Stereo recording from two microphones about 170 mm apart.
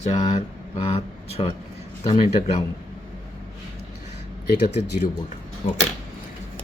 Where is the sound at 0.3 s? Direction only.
35° left (ahead or behind).